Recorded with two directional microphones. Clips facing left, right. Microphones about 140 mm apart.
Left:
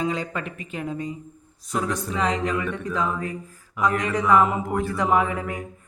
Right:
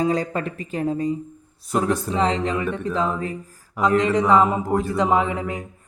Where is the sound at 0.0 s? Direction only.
40° right (ahead or behind).